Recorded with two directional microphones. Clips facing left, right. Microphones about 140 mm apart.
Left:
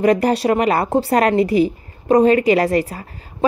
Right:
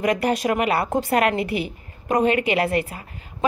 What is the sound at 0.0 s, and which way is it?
A woman's voice, 35° left (ahead or behind).